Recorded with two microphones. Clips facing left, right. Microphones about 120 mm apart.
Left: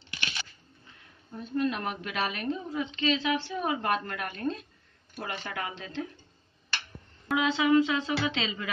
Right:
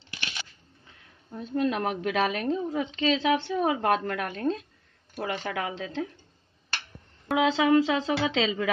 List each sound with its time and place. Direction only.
0.1 s crunch: 10° right (ahead or behind)
1.3 s a woman's voice: 90° right
7.2 s a woman's voice: 90° right